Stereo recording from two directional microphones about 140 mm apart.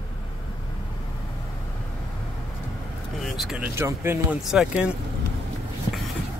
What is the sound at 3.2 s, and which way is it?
Speech, centre (ahead or behind).